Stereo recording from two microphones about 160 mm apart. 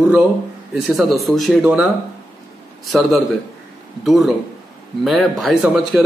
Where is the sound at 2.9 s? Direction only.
Centre (ahead or behind).